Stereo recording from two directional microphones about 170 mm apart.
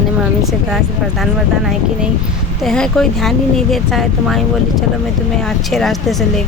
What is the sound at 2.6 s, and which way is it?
Speech, 5° left (ahead or behind).